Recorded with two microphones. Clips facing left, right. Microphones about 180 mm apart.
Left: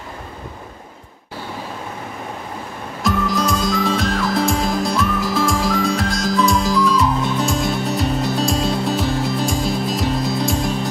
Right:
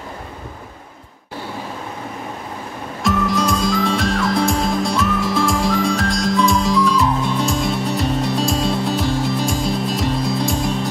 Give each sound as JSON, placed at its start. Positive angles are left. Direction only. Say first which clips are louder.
{"t": 3.0, "sound": "music", "louder": "right 1 dB", "side_deg": 0}